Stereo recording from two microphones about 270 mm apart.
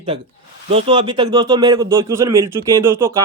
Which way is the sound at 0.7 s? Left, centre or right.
Centre.